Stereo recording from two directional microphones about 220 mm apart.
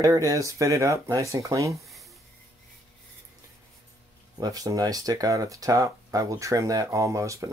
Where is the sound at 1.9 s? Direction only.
Centre (ahead or behind).